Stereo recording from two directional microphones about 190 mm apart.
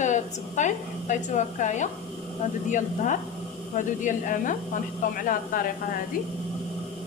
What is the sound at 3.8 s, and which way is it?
Speech, 45° left (ahead or behind).